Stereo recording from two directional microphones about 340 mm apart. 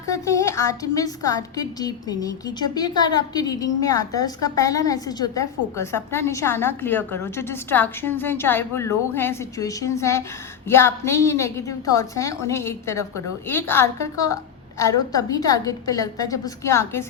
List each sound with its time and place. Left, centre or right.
0.1 s a woman's voice: centre